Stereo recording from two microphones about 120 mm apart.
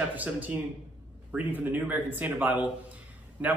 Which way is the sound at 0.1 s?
15° right (ahead or behind).